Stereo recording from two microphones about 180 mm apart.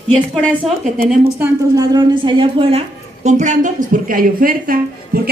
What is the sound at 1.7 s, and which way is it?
A woman's voice, 20° right (ahead or behind).